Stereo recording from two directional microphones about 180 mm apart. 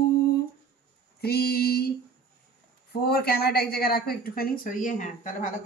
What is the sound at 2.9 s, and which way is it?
A woman's voice, 60° left (ahead or behind).